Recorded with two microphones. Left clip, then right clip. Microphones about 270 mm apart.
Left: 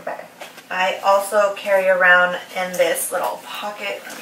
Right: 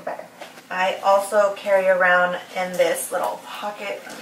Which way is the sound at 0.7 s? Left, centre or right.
Centre.